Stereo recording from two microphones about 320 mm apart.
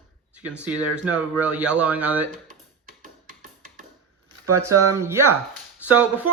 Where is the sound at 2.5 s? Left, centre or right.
Right.